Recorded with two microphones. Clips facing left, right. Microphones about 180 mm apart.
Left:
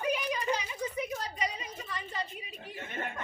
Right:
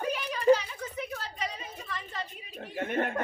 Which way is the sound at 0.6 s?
15° left (ahead or behind).